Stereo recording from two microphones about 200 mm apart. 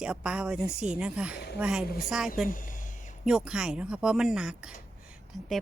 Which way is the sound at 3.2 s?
5° right (ahead or behind).